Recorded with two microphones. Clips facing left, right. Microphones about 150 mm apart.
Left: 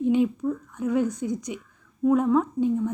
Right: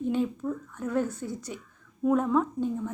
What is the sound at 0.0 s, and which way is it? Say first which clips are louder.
A woman's voice: left 6 dB; 15° left (ahead or behind).